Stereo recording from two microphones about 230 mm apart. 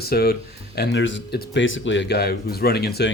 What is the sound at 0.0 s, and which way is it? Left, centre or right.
Speech, left.